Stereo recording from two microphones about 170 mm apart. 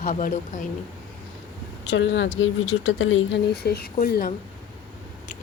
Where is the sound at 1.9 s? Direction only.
90° left; by 4.3 s 65° left (ahead or behind).